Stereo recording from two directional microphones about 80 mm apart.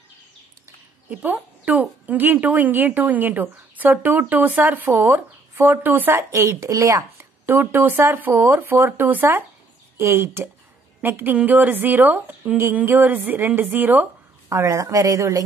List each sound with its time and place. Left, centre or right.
1.1 s a woman's voice: centre; by 7.2 s right
7.4 s a woman's voice: right
14.5 s a woman's voice: right